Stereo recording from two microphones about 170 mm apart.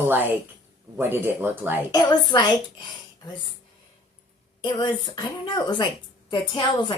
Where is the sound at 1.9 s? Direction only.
25° left (ahead or behind).